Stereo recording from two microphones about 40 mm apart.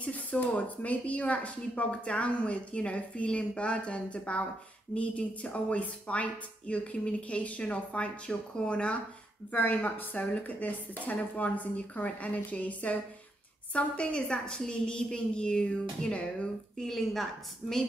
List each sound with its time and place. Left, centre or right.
0.0 s a sound: left
0.4 s a woman's voice: left
9.5 s a woman's voice: left
13.7 s a woman's voice: left
16.8 s a woman's voice: centre